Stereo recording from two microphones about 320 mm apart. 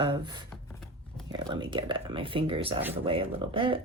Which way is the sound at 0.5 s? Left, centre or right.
Centre.